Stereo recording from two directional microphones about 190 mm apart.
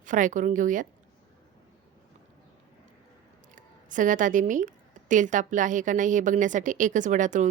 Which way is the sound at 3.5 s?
45° right (ahead or behind).